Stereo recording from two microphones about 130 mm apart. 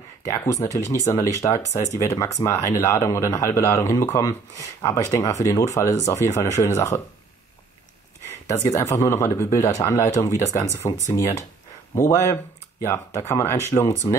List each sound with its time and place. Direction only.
0.2 s a man's voice: 25° left (ahead or behind)
8.3 s a man's voice: 25° left (ahead or behind)
11.9 s a man's voice: 25° left (ahead or behind)
14.0 s speech: 30° left (ahead or behind)